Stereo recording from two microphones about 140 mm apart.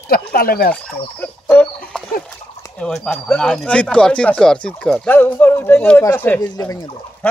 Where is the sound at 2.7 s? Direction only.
5° left (ahead or behind).